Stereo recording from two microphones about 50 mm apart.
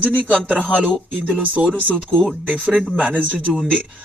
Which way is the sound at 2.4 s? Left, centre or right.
Right.